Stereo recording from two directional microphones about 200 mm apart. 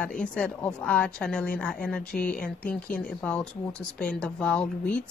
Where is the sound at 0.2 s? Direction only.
5° left (ahead or behind).